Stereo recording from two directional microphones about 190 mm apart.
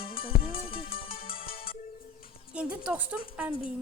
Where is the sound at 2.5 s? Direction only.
5° right (ahead or behind).